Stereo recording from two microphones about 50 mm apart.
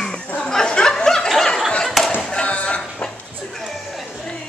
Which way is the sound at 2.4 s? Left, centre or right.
Left.